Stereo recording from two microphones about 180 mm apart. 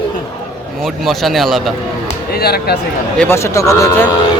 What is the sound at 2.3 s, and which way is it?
Speech, 60° left (ahead or behind).